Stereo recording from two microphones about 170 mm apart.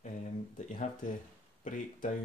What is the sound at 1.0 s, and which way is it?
Speech, 50° left (ahead or behind).